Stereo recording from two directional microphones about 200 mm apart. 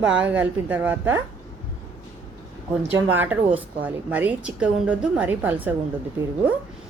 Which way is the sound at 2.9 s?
10° right (ahead or behind).